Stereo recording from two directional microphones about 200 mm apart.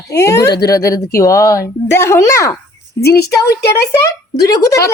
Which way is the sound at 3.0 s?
55° left (ahead or behind).